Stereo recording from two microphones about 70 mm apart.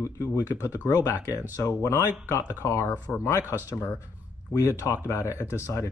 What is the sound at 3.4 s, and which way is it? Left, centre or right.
Speech, right.